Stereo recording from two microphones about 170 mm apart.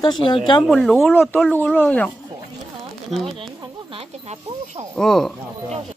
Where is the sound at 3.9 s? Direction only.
35° right (ahead or behind).